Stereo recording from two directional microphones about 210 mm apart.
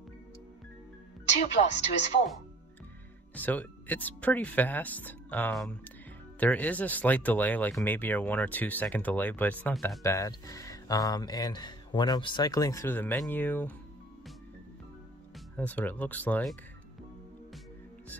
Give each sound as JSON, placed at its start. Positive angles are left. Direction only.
{"t": 1.6, "sound": "speech", "side_deg": 40}
{"t": 3.3, "sound": "speech", "side_deg": 10}
{"t": 15.5, "sound": "speech", "side_deg": 5}